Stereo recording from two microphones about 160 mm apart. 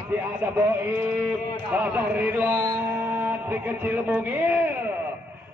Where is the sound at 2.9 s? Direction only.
15° right (ahead or behind).